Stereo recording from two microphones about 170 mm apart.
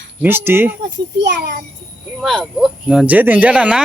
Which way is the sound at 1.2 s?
80° right.